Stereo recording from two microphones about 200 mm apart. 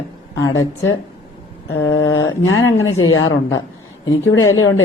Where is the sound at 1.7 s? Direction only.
75° left (ahead or behind).